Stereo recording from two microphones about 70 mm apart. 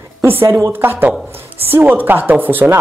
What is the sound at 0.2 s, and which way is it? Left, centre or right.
A woman's voice, right.